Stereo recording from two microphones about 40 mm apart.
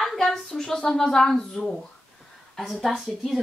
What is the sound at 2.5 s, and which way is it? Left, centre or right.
Speech, centre.